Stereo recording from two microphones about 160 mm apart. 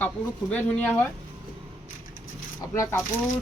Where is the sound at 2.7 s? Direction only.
20° left (ahead or behind).